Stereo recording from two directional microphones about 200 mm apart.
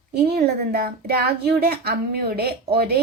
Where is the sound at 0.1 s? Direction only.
55° right (ahead or behind).